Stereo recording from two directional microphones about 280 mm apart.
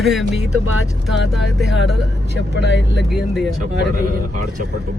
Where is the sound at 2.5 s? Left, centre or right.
Left.